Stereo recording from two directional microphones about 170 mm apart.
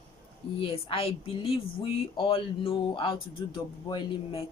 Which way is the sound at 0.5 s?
35° left (ahead or behind).